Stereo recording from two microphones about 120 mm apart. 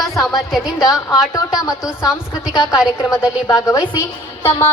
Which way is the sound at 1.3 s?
30° left (ahead or behind).